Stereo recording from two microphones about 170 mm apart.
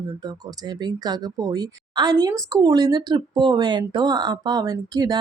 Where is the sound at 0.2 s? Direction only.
25° right (ahead or behind).